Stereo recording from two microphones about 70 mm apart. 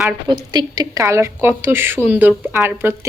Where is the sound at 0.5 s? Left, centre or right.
Right.